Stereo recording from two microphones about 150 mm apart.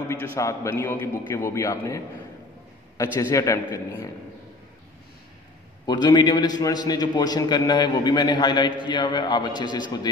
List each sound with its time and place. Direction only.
0.1 s a man's voice: 20° left (ahead or behind)
5.9 s a man's voice: 30° left (ahead or behind)